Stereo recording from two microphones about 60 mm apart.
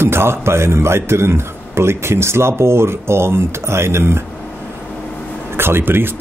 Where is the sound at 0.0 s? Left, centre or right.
Right.